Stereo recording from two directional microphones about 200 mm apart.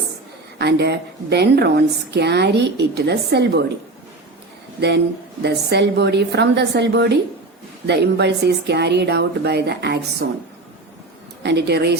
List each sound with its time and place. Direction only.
0.6 s a woman's voice: 55° right (ahead or behind)
5.4 s a woman's voice: 55° right (ahead or behind)
11.4 s a woman's voice: 55° right (ahead or behind)